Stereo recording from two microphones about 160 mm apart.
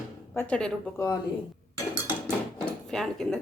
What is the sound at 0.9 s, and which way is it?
Speech, 20° left (ahead or behind).